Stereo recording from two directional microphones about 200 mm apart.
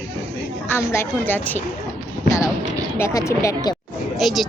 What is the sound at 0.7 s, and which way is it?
Speech, 15° left (ahead or behind).